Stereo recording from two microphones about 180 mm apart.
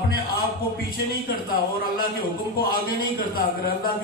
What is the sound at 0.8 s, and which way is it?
Speech, 55° left (ahead or behind).